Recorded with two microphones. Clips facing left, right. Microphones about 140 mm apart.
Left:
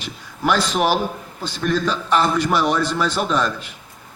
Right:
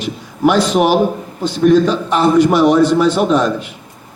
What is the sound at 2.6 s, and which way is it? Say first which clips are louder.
Speech: right 10 dB; 40° right (ahead or behind).